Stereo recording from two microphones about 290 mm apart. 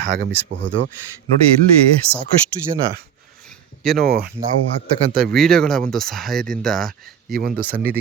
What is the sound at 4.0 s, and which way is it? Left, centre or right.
Speech, right.